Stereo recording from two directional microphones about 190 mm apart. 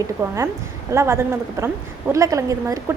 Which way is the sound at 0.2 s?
15° right (ahead or behind).